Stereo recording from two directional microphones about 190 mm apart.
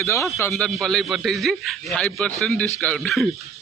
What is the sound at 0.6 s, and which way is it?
A man's voice, centre (ahead or behind).